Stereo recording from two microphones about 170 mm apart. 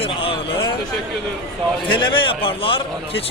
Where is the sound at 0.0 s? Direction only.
30° left (ahead or behind).